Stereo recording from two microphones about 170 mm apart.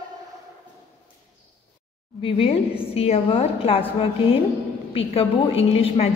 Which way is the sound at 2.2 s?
35° left (ahead or behind).